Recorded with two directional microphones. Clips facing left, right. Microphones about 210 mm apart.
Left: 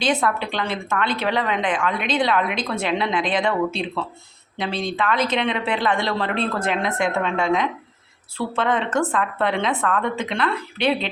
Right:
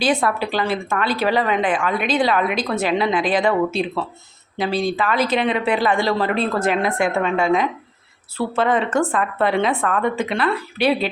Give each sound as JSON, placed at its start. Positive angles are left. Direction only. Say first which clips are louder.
{"t": 0.0, "sound": "a woman's voice", "louder": "right 2 dB", "side_deg": -5}